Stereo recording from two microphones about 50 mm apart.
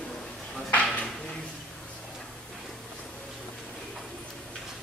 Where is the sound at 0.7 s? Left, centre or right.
Left.